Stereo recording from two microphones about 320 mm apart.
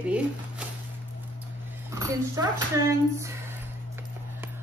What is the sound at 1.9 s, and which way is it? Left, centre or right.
Speech, centre.